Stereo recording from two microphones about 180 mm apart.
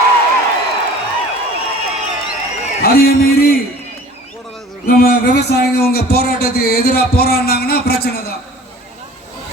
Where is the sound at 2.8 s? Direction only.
55° left (ahead or behind).